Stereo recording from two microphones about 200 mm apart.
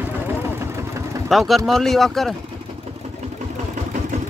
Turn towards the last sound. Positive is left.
turn(degrees=0)  # may be behind; listen again after turning